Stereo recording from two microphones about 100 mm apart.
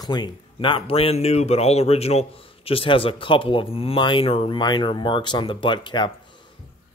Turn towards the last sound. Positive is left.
turn(degrees=50)  # may be behind; listen again after turning